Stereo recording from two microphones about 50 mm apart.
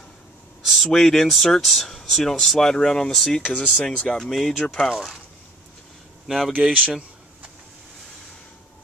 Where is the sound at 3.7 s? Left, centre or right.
Centre.